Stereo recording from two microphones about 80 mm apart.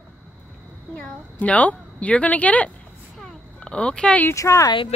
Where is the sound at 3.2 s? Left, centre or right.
Centre.